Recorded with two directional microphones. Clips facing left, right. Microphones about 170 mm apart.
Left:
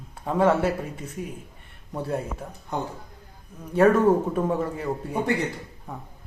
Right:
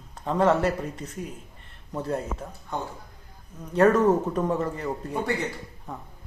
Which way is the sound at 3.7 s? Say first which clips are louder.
Left 1 dB; 5° left (ahead or behind).